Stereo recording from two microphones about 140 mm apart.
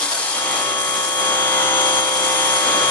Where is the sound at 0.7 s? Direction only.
15° left (ahead or behind).